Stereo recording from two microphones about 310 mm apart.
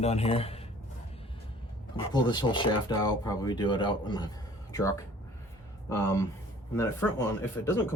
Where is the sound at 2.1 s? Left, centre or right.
Centre.